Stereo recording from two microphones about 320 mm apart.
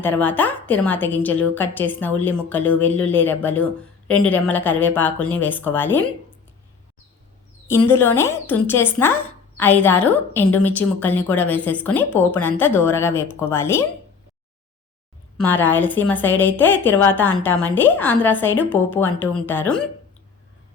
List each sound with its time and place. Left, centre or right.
0.0 s a woman's voice: centre
7.7 s a woman's voice: centre
15.4 s a woman's voice: centre